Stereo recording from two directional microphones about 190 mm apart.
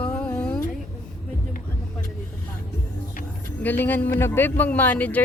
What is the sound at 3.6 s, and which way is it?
A man's voice, 10° left (ahead or behind).